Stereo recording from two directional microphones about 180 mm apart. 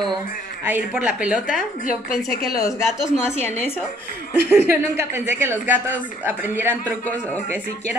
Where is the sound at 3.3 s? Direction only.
15° left (ahead or behind).